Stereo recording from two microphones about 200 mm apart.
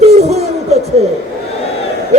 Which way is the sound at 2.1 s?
35° right (ahead or behind).